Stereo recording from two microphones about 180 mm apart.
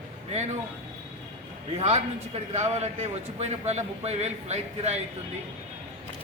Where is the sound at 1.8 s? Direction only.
35° right (ahead or behind).